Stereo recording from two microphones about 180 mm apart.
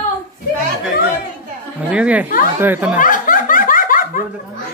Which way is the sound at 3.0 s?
50° left (ahead or behind).